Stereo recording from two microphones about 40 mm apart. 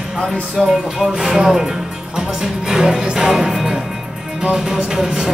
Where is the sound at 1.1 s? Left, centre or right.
Centre.